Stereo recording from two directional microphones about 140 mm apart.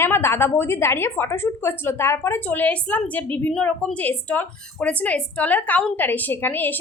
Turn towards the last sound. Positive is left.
turn(degrees=15)  # may be behind; listen again after turning